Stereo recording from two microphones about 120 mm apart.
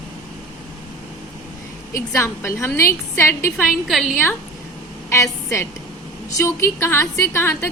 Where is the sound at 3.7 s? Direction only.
Centre (ahead or behind).